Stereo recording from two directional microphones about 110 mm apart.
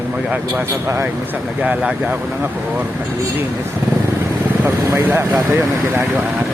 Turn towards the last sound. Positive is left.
turn(degrees=-25)  # may be behind; listen again after turning